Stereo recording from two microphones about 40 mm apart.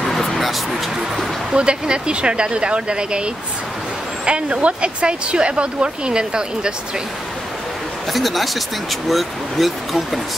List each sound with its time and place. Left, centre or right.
0.0 s a sound: centre
1.5 s speech: right
4.3 s speech: right
8.1 s speech: centre